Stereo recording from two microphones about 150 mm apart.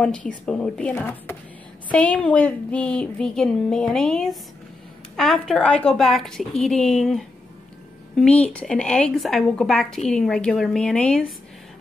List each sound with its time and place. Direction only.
0.0 s a woman's voice: 10° left (ahead or behind)